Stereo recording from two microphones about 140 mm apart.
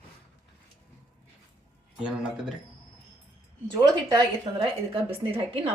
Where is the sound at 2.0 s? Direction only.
5° right (ahead or behind).